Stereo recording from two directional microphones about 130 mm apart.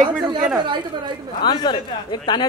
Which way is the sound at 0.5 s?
35° right (ahead or behind).